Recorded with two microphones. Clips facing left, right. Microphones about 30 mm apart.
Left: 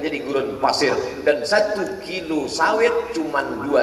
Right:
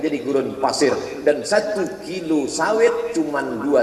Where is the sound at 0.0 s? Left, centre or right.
Left.